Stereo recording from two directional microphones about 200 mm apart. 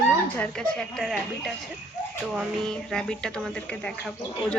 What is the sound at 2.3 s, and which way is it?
Speech, 5° left (ahead or behind).